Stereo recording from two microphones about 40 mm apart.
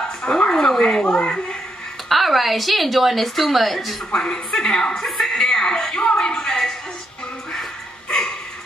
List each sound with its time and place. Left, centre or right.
0.0 s dog: centre
0.5 s a woman's voice: centre
2.0 s a woman's voice: centre
4.1 s a woman's voice: centre
6.1 s a sound: centre